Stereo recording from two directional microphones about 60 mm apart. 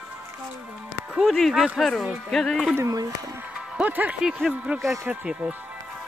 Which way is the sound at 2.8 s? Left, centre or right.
Right.